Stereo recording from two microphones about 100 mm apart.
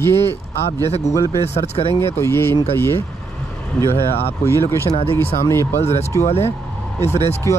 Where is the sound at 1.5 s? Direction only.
75° left (ahead or behind).